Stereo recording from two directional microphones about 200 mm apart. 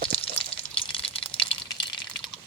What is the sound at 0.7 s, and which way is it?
Water, 25° left (ahead or behind).